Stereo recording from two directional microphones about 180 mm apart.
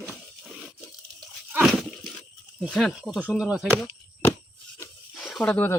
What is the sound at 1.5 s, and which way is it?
Splash, 5° right (ahead or behind).